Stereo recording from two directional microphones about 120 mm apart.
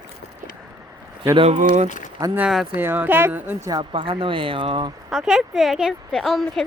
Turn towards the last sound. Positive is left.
turn(degrees=0)  # may be behind; listen again after turning